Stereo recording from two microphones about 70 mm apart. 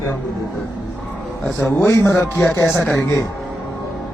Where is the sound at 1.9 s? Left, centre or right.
Left.